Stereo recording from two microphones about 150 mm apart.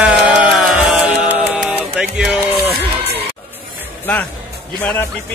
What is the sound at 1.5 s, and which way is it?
Music, 5° right (ahead or behind).